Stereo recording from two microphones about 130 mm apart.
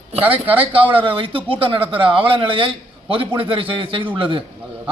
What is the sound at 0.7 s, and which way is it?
A man's voice, 40° right (ahead or behind).